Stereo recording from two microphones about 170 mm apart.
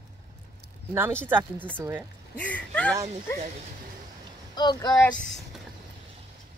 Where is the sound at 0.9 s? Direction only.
15° right (ahead or behind).